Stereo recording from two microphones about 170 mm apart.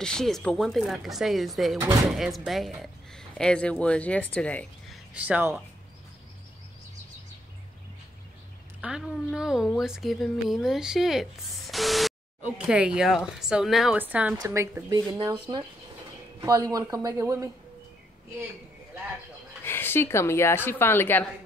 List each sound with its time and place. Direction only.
0.0 s speech: 5° left (ahead or behind)
5.1 s speech: 10° right (ahead or behind)
8.8 s speech: 5° right (ahead or behind)
19.6 s a woman's voice: 15° left (ahead or behind)